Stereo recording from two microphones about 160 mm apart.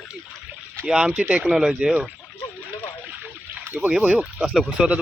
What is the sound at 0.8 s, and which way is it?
Speech, 5° right (ahead or behind).